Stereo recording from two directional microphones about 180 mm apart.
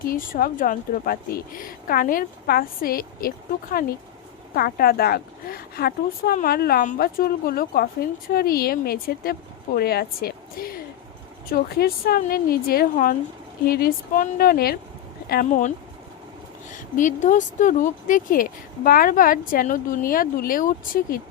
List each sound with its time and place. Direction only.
0.1 s speech: 50° left (ahead or behind)